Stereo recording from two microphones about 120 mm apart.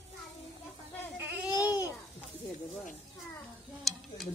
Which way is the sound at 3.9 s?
Centre (ahead or behind).